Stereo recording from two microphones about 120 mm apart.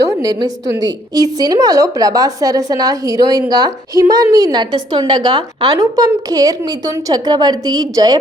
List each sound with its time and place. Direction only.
0.0 s a woman's voice: 30° right (ahead or behind)
5.8 s a woman's voice: 30° right (ahead or behind)